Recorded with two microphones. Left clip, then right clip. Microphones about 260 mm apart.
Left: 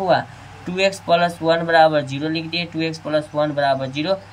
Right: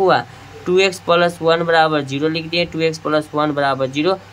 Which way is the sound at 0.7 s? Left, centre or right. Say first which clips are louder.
Right 3 dB; centre.